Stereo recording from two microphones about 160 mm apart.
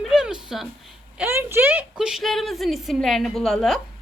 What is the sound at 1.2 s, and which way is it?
A woman's voice, 15° right (ahead or behind).